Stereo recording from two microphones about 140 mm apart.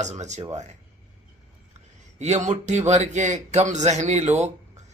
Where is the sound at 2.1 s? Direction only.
55° right (ahead or behind).